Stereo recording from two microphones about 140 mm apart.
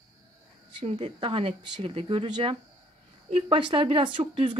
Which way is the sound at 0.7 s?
45° right (ahead or behind).